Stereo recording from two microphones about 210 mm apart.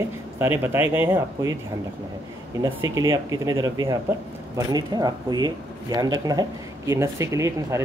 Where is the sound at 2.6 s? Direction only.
15° right (ahead or behind).